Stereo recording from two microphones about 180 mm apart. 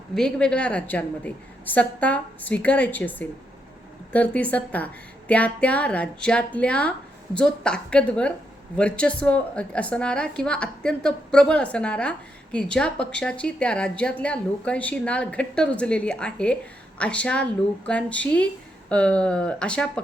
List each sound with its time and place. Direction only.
0.1 s a woman's voice: 5° left (ahead or behind)